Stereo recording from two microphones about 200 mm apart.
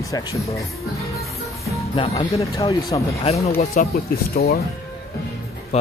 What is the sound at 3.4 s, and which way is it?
Speech, 35° left (ahead or behind).